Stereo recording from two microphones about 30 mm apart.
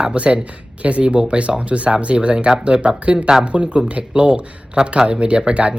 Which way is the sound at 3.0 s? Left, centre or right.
Right.